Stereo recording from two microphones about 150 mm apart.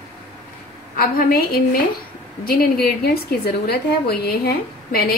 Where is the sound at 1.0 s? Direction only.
80° left.